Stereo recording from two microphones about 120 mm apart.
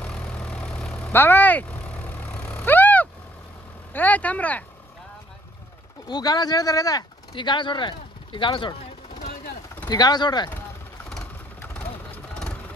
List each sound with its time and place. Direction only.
0.0 s vehicle: 10° left (ahead or behind)
3.9 s speech: 15° left (ahead or behind)
6.0 s speech: 35° left (ahead or behind)
9.8 s speech: 35° left (ahead or behind)